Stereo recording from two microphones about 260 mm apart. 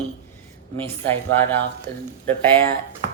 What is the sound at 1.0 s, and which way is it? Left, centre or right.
Speech, centre.